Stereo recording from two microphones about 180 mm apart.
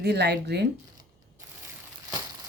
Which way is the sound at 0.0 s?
70° right (ahead or behind).